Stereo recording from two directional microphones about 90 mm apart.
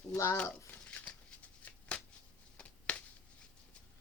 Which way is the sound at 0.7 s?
15° left (ahead or behind).